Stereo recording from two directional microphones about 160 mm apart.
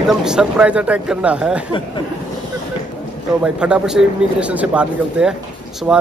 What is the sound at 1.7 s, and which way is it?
Speech, 30° left (ahead or behind).